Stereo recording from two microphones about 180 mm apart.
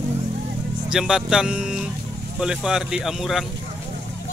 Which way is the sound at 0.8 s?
5° right (ahead or behind).